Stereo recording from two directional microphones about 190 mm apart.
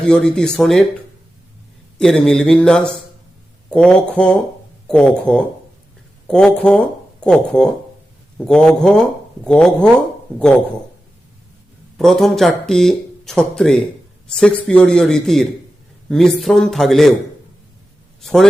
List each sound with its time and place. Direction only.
0.0 s speech: 5° left (ahead or behind)
2.0 s speech: 5° left (ahead or behind)
11.9 s speech: centre (ahead or behind)
18.2 s a man's voice: centre (ahead or behind)